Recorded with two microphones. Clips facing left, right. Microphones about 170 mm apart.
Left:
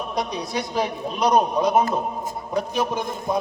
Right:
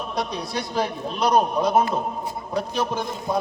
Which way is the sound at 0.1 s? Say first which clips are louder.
Left 1 dB; 15° left (ahead or behind).